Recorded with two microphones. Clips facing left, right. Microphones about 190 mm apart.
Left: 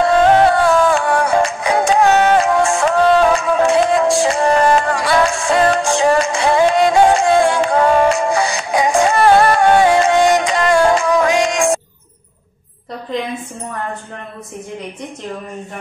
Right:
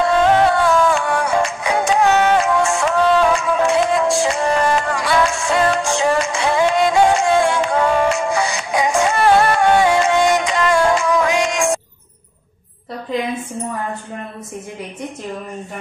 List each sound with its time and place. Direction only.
0.0 s music: 35° left (ahead or behind)